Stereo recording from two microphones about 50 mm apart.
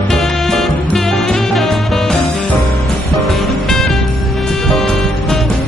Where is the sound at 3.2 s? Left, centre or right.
Centre.